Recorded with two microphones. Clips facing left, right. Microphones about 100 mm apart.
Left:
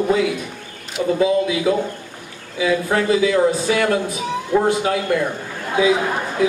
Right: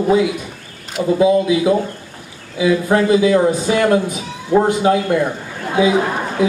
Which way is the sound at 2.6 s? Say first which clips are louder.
Right 4 dB; 25° right (ahead or behind).